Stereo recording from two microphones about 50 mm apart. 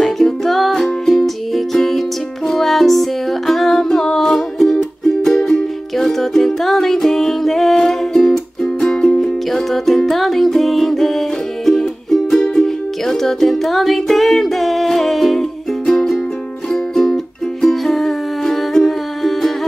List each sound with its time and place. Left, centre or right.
0.0 s music: centre
9.2 s music: centre
15.8 s music: centre
16.7 s music: centre